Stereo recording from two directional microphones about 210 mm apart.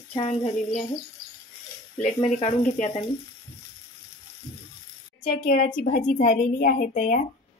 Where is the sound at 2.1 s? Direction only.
30° left (ahead or behind).